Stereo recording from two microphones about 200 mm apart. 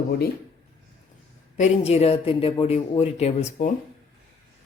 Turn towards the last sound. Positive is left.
turn(degrees=30)  # may be behind; listen again after turning